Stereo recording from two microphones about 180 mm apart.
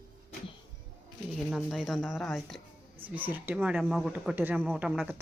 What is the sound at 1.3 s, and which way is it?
Speech, centre (ahead or behind).